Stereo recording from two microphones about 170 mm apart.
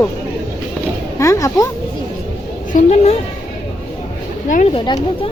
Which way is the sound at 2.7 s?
40° left (ahead or behind).